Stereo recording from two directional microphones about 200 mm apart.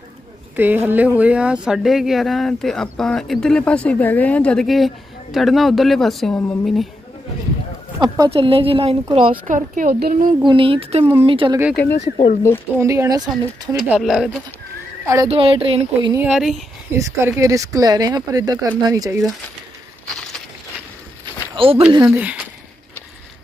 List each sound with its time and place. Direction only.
0.6 s speech: 10° right (ahead or behind)
8.0 s a woman's voice: 25° right (ahead or behind)
9.5 s a woman's voice: 45° right (ahead or behind)
10.4 s a woman's voice: 25° right (ahead or behind)
12.0 s speech: 35° left (ahead or behind)
12.7 s speech: 15° right (ahead or behind)
13.7 s speech: centre (ahead or behind)
15.2 s a woman's voice: 25° right (ahead or behind)
16.1 s speech: 5° right (ahead or behind)
16.9 s speech: 15° right (ahead or behind)
21.5 s a woman's voice: 30° right (ahead or behind)
22.2 s speech: 5° right (ahead or behind)